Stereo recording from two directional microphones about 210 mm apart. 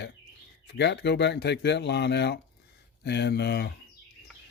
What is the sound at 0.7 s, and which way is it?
Speech, 55° left (ahead or behind).